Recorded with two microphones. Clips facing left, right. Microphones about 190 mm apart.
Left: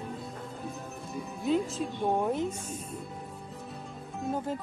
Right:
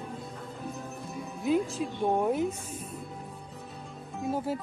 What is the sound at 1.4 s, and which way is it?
Speech, centre (ahead or behind).